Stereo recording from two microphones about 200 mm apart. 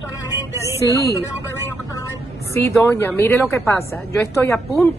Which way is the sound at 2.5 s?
10° left (ahead or behind).